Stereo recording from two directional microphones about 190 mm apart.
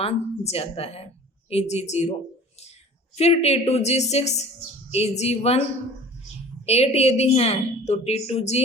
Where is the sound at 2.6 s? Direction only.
35° left (ahead or behind).